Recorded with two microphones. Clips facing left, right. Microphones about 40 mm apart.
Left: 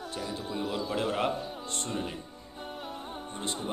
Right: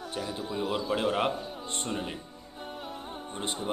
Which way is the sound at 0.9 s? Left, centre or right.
Centre.